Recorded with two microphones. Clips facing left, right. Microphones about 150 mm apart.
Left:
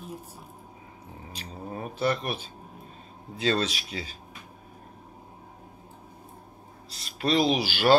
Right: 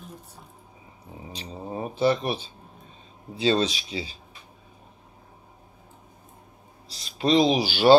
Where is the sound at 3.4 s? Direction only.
25° right (ahead or behind).